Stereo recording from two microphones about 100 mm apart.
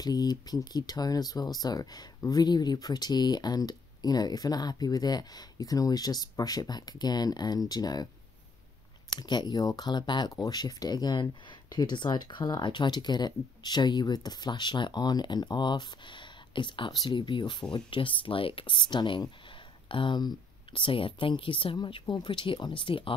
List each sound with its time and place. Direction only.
0.0 s speech: 40° left (ahead or behind)
9.1 s speech: 45° left (ahead or behind); by 21.7 s 60° left (ahead or behind)
21.7 s speech: 50° left (ahead or behind)